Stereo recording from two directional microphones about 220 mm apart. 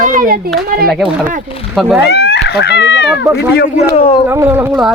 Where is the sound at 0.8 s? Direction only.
Centre (ahead or behind).